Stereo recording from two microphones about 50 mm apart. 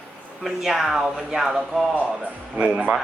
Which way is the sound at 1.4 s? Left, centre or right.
Centre.